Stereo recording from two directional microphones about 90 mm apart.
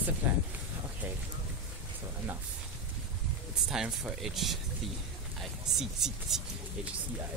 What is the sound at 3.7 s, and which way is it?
Speech, 5° right (ahead or behind).